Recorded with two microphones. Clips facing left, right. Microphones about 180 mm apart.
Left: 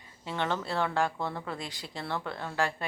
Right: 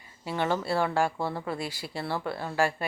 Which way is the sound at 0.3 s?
10° right (ahead or behind).